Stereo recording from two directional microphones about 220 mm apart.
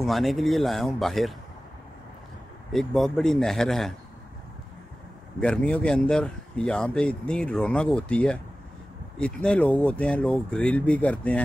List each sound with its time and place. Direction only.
0.0 s speech: centre (ahead or behind)
2.7 s speech: centre (ahead or behind)
5.4 s speech: 5° left (ahead or behind)